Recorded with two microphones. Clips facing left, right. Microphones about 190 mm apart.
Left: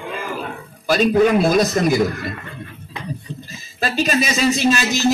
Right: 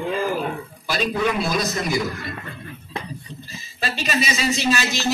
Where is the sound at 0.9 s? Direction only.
50° left (ahead or behind).